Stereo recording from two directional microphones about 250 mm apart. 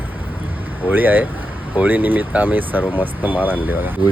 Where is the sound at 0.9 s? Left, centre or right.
Centre.